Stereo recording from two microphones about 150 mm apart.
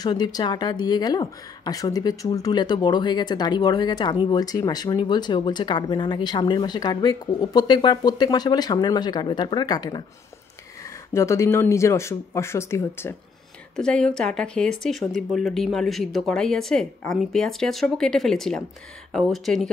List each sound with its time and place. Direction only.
0.0 s speech: 25° left (ahead or behind)
13.7 s speech: 5° left (ahead or behind)